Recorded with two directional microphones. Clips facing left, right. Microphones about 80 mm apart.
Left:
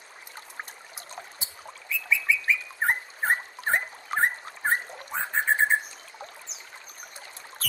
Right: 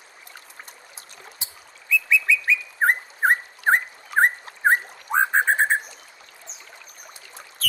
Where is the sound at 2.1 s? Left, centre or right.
Right.